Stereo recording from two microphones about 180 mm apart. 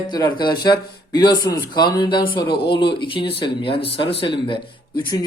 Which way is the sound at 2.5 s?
60° left (ahead or behind).